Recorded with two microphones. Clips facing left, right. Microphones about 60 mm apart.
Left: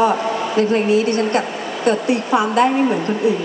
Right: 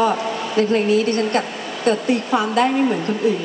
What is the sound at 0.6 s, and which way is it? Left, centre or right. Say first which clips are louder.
Speech: even; left.